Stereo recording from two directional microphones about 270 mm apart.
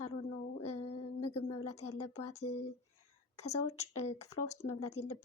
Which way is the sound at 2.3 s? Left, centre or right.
Left.